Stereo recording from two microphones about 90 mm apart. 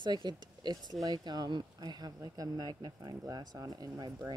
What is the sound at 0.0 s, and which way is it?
Speech, 55° right (ahead or behind).